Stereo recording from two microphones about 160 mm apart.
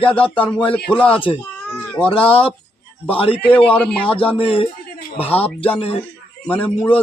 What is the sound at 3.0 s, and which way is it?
Speech, 35° left (ahead or behind).